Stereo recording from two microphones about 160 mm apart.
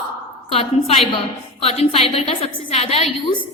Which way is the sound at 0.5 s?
40° left (ahead or behind).